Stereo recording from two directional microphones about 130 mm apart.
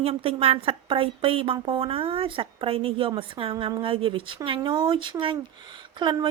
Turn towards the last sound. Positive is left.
turn(degrees=-35)  # may be behind; listen again after turning